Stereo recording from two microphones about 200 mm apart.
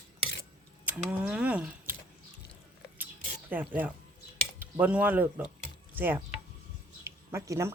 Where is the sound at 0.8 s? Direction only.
5° right (ahead or behind).